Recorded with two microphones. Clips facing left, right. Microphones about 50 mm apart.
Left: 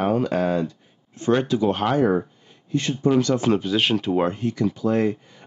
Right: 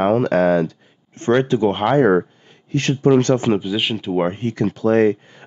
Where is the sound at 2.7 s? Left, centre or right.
Right.